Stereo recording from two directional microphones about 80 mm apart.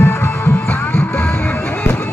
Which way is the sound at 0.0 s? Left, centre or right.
Left.